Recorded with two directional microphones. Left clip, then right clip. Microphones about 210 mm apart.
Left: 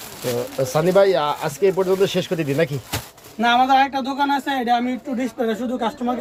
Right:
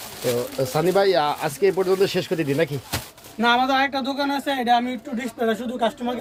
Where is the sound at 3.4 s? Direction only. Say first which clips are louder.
Left 3 dB; 15° right (ahead or behind).